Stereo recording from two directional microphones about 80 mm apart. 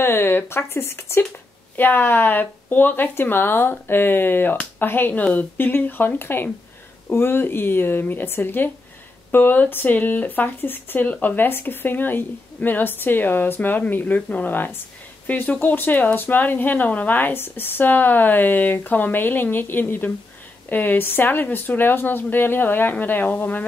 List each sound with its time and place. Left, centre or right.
0.0 s speech: left